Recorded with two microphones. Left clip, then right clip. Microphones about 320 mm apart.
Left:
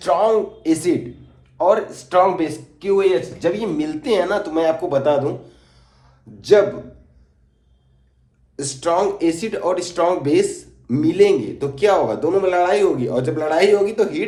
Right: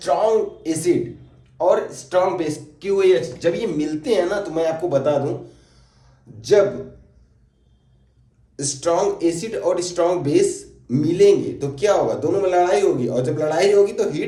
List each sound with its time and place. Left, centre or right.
0.0 s speech: left
8.5 s speech: left